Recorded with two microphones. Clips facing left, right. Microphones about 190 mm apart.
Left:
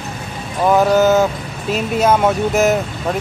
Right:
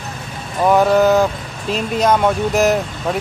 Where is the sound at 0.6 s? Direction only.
Centre (ahead or behind).